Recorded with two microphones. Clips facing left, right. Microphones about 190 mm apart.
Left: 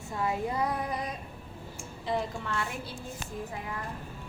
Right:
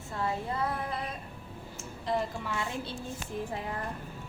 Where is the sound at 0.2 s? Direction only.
15° left (ahead or behind).